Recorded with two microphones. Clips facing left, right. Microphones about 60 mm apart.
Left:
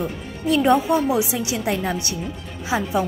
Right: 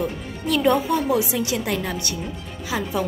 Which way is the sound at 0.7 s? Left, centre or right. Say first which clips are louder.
Left 1 dB; left.